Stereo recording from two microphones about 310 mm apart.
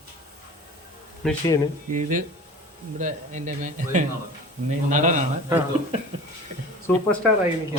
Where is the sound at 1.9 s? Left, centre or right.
Right.